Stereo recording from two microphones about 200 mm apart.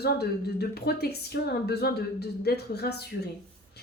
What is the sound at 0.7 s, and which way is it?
A woman's voice, 50° left (ahead or behind).